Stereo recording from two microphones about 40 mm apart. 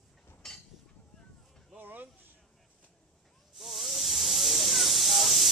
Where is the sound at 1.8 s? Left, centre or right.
Right.